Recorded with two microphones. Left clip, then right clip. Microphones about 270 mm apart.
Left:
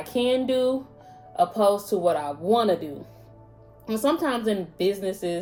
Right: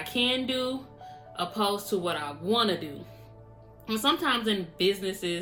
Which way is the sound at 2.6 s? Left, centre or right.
Centre.